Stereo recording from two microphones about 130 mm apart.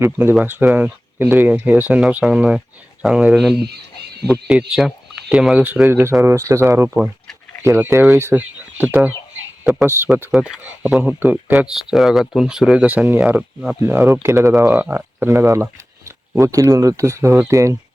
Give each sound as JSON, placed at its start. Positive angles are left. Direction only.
{"t": 0.0, "sound": "speech", "side_deg": -15}
{"t": 10.3, "sound": "speech", "side_deg": -5}
{"t": 11.5, "sound": "speech", "side_deg": -5}